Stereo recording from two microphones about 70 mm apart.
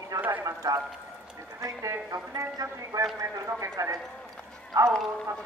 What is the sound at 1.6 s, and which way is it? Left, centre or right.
A woman's voice, right.